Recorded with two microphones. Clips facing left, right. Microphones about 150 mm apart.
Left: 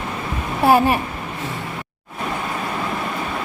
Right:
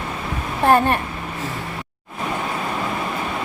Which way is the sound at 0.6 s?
5° left (ahead or behind).